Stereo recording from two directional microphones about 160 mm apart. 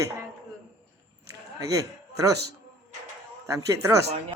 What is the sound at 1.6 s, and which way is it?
Speech, 20° right (ahead or behind).